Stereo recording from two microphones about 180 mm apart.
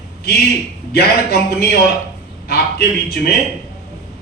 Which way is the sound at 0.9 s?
60° left (ahead or behind).